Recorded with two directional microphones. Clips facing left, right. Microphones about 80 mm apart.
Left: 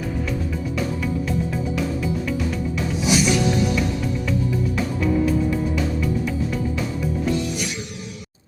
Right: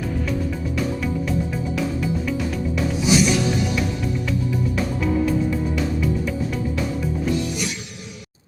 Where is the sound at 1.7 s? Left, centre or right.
Centre.